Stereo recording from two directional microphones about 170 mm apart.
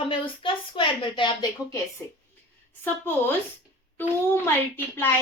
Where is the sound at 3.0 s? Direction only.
15° left (ahead or behind).